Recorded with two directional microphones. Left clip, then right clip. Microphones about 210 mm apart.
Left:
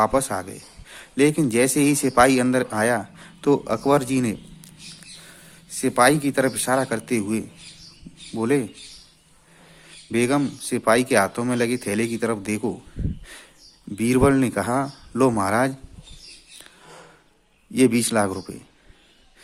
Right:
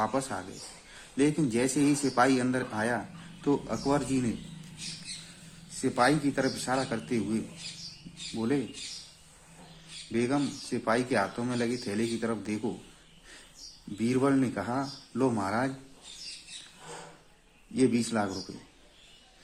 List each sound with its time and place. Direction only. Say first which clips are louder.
0.0 s speech: left 10 dB; 45° left (ahead or behind)
5.8 s speech: left 8 dB; 45° left (ahead or behind)
10.1 s speech: left 8 dB; 50° left (ahead or behind)
13.9 s speech: left 9 dB; 45° left (ahead or behind)
17.7 s speech: left 8 dB; 50° left (ahead or behind)